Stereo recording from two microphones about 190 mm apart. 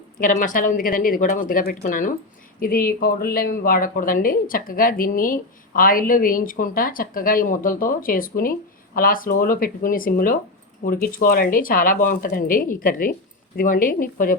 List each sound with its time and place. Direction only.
0.2 s speech: 45° left (ahead or behind)